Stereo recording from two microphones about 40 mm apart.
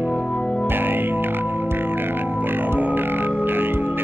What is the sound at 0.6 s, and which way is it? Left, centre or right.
Music, right.